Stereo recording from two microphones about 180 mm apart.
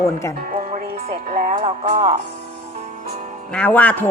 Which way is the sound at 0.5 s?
55° right (ahead or behind).